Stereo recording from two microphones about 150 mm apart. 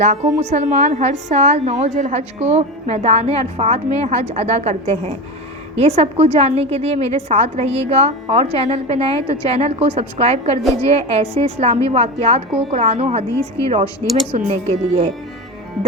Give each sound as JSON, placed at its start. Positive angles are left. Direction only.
{"t": 0.0, "sound": "a woman's voice", "side_deg": -50}